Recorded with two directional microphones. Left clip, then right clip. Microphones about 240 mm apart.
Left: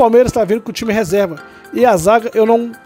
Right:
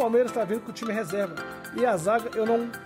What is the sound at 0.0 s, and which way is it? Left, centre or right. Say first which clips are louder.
Speech: left 13 dB; left.